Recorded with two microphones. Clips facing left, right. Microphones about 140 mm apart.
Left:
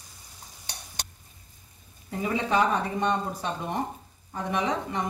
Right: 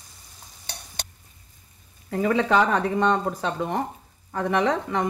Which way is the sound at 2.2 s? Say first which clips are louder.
Right 4 dB; 80° right.